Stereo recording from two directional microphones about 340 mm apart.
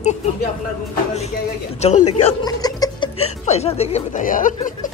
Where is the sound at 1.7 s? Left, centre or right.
Centre.